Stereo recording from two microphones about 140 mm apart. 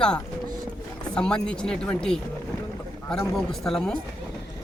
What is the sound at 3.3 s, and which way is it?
Speech, centre (ahead or behind).